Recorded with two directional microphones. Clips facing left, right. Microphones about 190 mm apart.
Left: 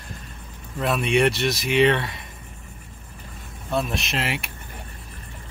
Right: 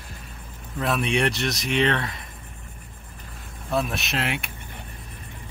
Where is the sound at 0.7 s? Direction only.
Centre (ahead or behind).